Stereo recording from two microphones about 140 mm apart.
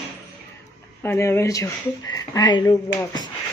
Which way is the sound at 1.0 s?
20° left (ahead or behind).